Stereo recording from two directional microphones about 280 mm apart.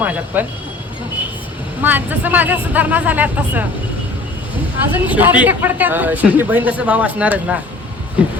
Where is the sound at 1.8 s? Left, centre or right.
Centre.